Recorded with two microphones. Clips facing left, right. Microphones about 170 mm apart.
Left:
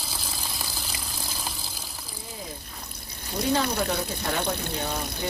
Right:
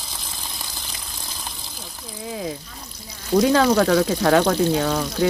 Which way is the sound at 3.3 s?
70° right (ahead or behind).